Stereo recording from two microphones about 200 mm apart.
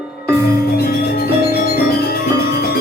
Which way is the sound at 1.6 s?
50° left (ahead or behind).